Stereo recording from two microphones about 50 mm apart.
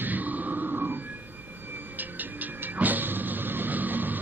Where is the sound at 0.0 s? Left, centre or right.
Right.